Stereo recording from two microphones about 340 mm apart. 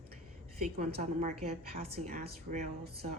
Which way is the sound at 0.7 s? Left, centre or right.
Centre.